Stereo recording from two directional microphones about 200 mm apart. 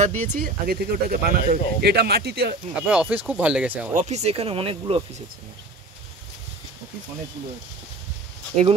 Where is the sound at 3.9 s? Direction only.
35° right (ahead or behind).